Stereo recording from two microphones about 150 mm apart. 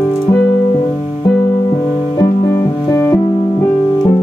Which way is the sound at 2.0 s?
25° left (ahead or behind).